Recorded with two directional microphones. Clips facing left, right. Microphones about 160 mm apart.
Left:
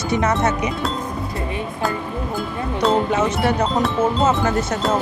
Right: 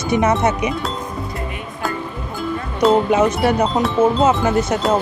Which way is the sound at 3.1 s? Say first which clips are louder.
Right 3 dB; 15° right (ahead or behind).